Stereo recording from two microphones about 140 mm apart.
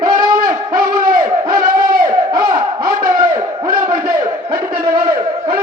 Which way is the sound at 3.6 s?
30° right (ahead or behind).